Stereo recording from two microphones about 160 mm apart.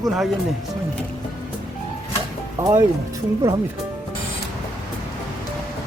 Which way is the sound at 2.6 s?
20° right (ahead or behind).